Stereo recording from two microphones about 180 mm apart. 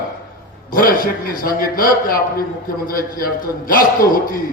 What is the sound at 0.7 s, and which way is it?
A man's voice, 50° left (ahead or behind).